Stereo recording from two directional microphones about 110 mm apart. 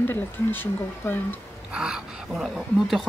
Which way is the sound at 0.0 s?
20° left (ahead or behind).